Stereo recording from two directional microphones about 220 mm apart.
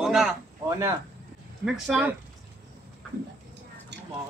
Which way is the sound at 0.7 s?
15° right (ahead or behind).